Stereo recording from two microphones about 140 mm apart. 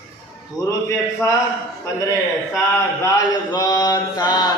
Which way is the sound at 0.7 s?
25° left (ahead or behind).